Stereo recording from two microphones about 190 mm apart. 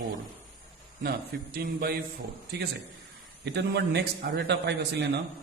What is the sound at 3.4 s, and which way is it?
A man's voice, 65° right (ahead or behind).